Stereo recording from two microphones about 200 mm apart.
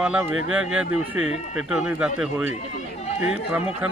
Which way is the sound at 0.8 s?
90° right.